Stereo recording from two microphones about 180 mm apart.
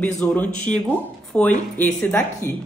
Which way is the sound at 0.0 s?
5° left (ahead or behind).